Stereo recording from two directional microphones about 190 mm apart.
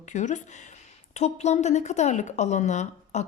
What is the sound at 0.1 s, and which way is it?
A woman's voice, 40° left (ahead or behind).